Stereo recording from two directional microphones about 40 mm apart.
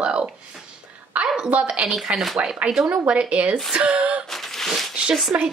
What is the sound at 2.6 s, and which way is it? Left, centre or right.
Speech, right.